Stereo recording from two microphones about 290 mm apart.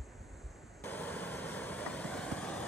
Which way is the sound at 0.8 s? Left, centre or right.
Centre.